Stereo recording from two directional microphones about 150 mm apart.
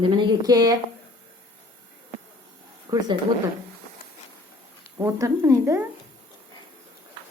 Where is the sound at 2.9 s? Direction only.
25° right (ahead or behind).